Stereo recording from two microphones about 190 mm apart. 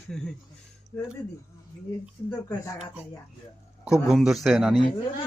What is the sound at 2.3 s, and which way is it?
Speech, 15° left (ahead or behind).